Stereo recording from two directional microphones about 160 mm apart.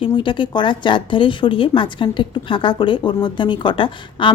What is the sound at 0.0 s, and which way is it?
Speech, 30° left (ahead or behind).